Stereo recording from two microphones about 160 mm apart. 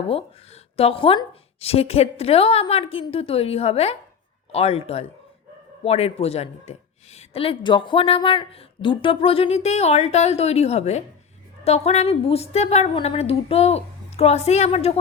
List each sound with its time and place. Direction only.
0.1 s a woman's voice: 35° left (ahead or behind)